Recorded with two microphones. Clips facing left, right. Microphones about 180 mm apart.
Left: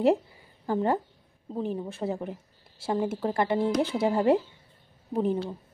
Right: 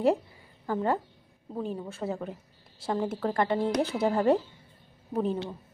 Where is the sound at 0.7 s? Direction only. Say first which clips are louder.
Left 2 dB; 20° left (ahead or behind).